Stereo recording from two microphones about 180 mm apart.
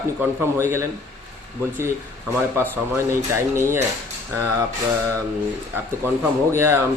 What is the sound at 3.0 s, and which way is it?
Speech, 15° right (ahead or behind).